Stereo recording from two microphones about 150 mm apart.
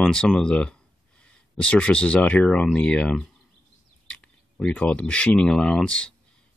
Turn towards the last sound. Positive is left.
turn(degrees=5)  # may be behind; listen again after turning